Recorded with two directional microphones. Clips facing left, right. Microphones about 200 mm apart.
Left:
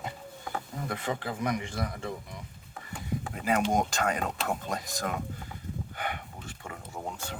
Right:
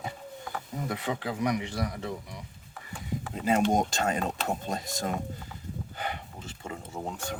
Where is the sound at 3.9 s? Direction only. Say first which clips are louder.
Right 1 dB; 25° right (ahead or behind).